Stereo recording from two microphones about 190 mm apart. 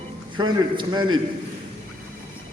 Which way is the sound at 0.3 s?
25° right (ahead or behind).